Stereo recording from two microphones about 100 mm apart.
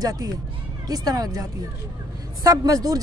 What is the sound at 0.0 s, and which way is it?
A man's voice, 40° right (ahead or behind).